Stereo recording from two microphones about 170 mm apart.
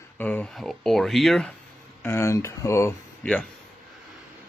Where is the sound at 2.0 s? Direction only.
15° left (ahead or behind).